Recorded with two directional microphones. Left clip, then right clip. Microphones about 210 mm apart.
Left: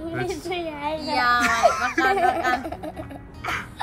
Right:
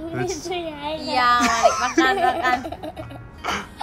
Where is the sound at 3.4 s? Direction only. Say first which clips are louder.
Right 2 dB; 10° right (ahead or behind).